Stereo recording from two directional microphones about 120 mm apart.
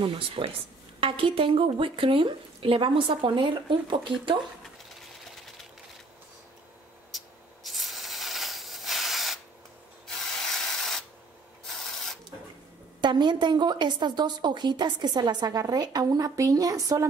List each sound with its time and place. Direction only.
0.0 s speech: 50° right (ahead or behind)
7.1 s a sound: centre (ahead or behind)
10.0 s spray: 5° left (ahead or behind)
13.0 s a woman's voice: 40° right (ahead or behind)